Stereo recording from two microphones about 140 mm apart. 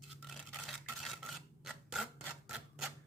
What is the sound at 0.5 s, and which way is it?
Filing, centre (ahead or behind).